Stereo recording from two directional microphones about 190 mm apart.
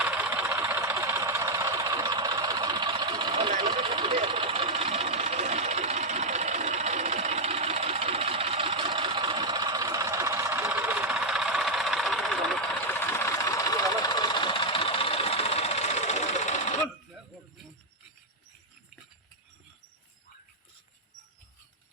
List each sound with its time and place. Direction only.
0.0 s vehicle: 10° right (ahead or behind); by 16.6 s 35° left (ahead or behind)